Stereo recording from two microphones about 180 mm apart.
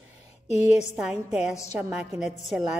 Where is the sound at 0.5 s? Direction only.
35° left (ahead or behind).